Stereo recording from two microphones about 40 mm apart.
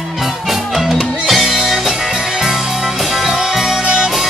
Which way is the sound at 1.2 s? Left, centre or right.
Centre.